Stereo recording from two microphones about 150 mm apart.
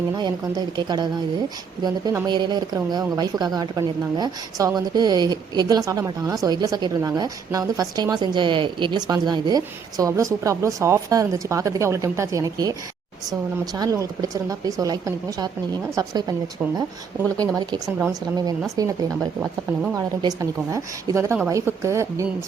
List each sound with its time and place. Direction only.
0.2 s a woman's voice: 30° right (ahead or behind)
2.2 s a woman's voice: 30° right (ahead or behind)
13.7 s a woman's voice: 25° right (ahead or behind)
17.3 s a woman's voice: 25° right (ahead or behind)